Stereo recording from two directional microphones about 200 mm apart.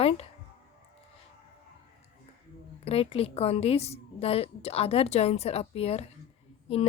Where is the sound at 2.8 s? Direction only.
30° left (ahead or behind).